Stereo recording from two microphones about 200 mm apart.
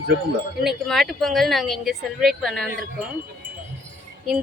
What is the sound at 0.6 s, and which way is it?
A woman's voice, centre (ahead or behind).